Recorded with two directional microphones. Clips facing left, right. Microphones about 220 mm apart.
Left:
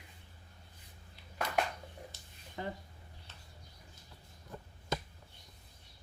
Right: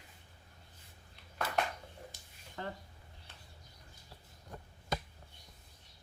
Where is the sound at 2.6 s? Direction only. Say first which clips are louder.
Left 2 dB; 15° left (ahead or behind).